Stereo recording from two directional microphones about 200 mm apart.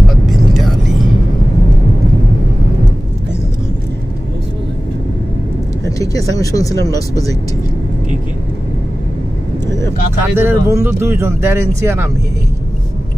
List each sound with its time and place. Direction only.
5.9 s speech: 15° left (ahead or behind)
10.2 s speech: 10° right (ahead or behind)